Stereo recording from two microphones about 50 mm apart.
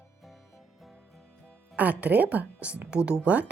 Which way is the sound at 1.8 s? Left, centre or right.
Right.